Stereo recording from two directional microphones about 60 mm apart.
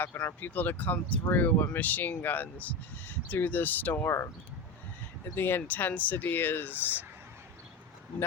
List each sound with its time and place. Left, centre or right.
0.0 s speech: left
4.0 s speech: left
5.3 s speech: left